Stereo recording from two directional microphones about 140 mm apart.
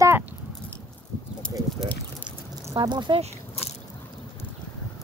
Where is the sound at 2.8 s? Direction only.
35° right (ahead or behind).